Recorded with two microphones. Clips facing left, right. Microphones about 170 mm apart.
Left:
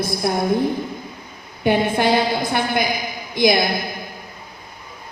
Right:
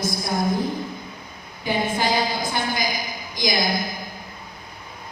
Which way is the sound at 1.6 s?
60° left (ahead or behind).